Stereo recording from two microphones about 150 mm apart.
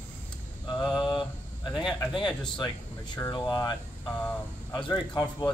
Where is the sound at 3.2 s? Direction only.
15° left (ahead or behind).